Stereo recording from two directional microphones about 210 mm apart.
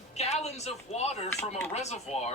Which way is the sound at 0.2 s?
30° left (ahead or behind).